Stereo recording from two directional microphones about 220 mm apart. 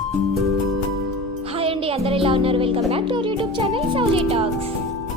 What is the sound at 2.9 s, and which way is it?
Speech, 20° right (ahead or behind).